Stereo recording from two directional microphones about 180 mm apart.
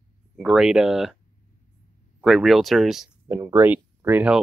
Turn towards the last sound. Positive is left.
turn(degrees=-10)  # may be behind; listen again after turning